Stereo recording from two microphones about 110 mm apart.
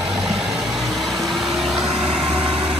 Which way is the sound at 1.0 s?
Centre (ahead or behind).